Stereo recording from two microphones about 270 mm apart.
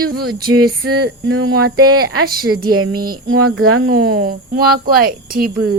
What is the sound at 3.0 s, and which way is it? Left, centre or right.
Speech, right.